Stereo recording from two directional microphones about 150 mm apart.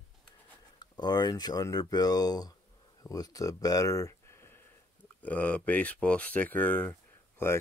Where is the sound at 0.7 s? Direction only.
30° left (ahead or behind).